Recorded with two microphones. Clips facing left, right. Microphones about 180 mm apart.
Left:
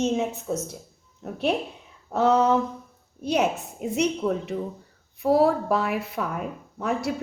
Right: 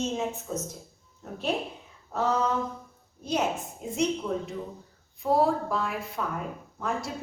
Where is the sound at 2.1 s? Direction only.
75° left (ahead or behind).